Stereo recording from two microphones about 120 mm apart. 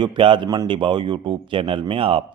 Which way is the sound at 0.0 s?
45° right (ahead or behind).